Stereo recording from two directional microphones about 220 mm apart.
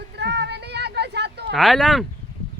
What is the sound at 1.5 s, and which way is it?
Speech, centre (ahead or behind).